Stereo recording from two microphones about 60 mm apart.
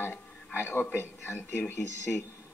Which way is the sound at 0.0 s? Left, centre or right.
Left.